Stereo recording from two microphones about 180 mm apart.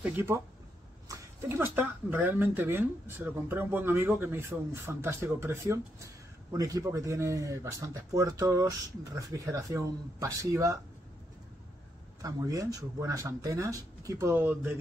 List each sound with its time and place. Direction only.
0.0 s speech: 10° right (ahead or behind)
12.2 s speech: 20° right (ahead or behind)